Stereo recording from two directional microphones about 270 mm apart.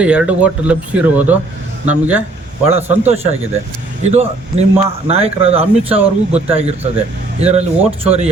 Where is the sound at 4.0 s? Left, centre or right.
Right.